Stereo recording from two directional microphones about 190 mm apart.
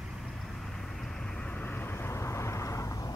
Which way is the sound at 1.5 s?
10° left (ahead or behind).